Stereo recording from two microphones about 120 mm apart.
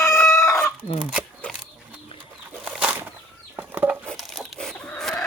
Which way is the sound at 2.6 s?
10° right (ahead or behind).